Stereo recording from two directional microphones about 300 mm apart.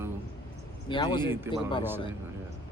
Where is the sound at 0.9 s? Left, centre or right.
Centre.